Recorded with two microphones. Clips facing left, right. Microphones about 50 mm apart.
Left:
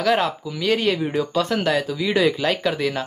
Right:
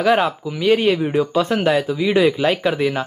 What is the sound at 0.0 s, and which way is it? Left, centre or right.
Speech, centre.